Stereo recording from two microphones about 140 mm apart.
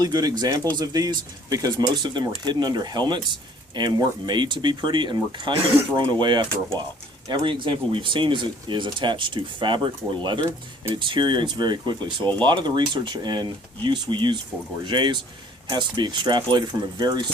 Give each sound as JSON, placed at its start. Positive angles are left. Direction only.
{"t": 0.0, "sound": "speech", "side_deg": -30}